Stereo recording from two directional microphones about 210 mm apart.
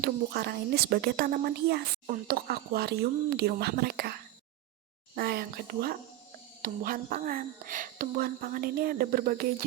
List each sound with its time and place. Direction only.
0.0 s speech: 50° right (ahead or behind)